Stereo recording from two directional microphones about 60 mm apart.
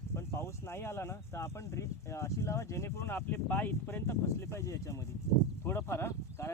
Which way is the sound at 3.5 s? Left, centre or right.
Left.